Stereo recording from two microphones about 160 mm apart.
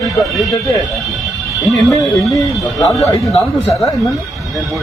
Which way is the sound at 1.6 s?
Centre (ahead or behind).